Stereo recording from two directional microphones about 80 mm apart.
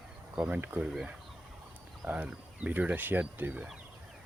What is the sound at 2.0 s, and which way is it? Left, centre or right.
Speech, centre.